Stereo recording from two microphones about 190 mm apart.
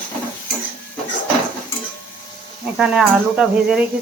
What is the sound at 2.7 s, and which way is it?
Speech, 5° right (ahead or behind).